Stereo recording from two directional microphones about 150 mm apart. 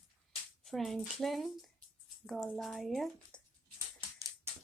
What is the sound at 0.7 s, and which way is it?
Speech, centre (ahead or behind).